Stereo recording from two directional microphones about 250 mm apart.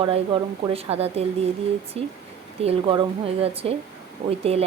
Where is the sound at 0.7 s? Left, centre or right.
Right.